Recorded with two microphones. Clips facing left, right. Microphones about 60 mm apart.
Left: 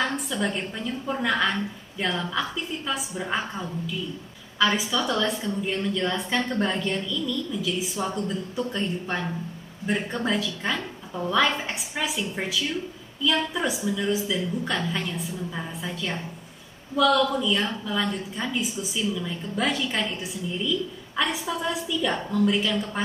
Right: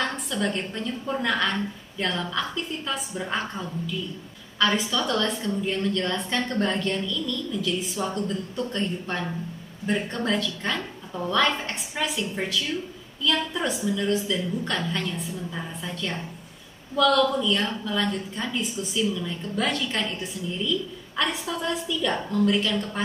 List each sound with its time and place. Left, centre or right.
0.0 s a woman's voice: centre